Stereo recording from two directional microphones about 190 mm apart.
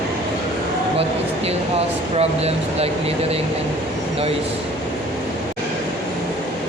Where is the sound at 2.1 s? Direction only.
30° right (ahead or behind).